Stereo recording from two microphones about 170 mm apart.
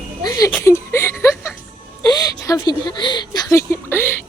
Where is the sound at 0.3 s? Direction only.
20° left (ahead or behind).